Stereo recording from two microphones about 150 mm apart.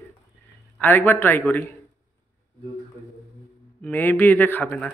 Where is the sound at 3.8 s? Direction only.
10° left (ahead or behind).